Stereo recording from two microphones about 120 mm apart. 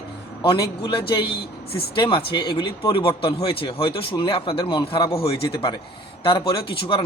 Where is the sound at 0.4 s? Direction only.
45° left (ahead or behind).